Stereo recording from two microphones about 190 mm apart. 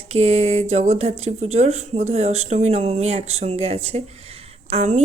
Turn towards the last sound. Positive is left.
turn(degrees=-35)  # may be behind; listen again after turning